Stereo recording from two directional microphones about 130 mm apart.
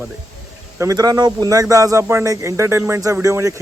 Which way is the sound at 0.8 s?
25° right (ahead or behind).